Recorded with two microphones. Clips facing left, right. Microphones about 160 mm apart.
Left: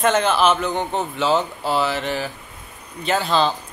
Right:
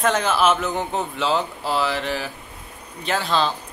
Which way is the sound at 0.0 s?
Centre (ahead or behind).